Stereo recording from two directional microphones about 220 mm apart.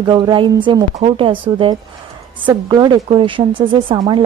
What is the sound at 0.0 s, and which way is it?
A woman's voice, 20° right (ahead or behind).